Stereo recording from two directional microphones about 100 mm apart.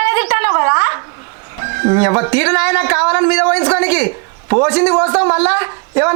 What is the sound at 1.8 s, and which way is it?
A man's voice, 30° right (ahead or behind).